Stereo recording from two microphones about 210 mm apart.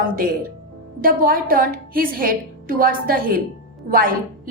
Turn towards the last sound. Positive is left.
turn(degrees=-45)  # may be behind; listen again after turning